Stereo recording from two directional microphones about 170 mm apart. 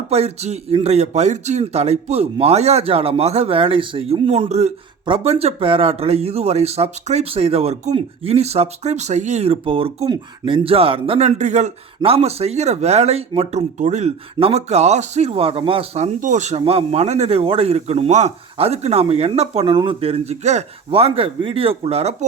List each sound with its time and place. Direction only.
0.1 s speech: 40° right (ahead or behind)